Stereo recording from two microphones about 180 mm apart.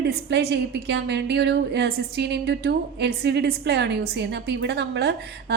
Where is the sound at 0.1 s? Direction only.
70° right (ahead or behind).